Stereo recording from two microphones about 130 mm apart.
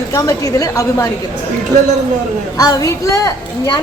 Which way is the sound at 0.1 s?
25° left (ahead or behind).